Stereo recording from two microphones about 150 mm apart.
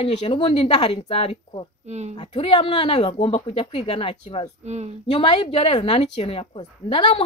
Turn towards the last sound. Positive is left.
turn(degrees=35)  # may be behind; listen again after turning